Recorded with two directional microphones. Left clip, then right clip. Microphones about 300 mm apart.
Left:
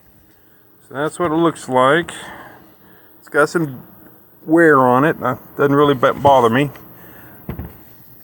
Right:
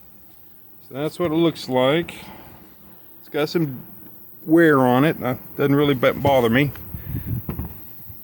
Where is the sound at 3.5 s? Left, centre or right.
Centre.